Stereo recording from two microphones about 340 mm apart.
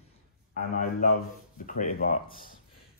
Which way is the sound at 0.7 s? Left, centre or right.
Left.